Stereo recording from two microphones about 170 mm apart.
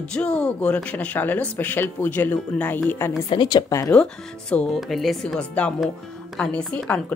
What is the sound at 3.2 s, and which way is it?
Speech, 25° left (ahead or behind).